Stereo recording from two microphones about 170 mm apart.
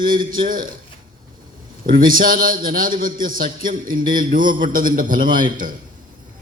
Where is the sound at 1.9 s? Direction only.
55° right (ahead or behind).